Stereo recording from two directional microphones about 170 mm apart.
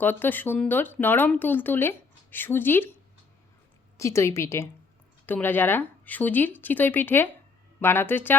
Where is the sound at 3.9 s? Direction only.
15° left (ahead or behind).